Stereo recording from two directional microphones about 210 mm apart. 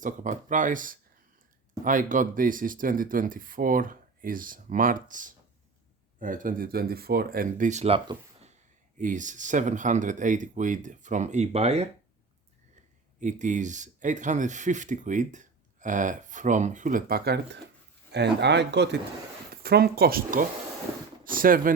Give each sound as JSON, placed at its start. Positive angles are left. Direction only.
{"t": 0.0, "sound": "speech", "side_deg": -35}
{"t": 13.1, "sound": "speech", "side_deg": -35}